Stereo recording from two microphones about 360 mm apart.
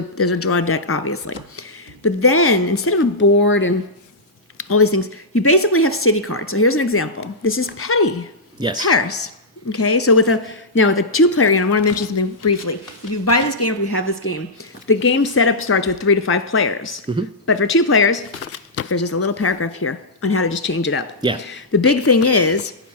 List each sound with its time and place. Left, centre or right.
0.2 s speech: left
8.5 s speech: centre
8.9 s speech: left